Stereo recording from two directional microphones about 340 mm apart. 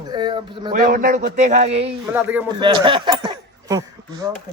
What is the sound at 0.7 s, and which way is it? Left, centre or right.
A man's voice, right.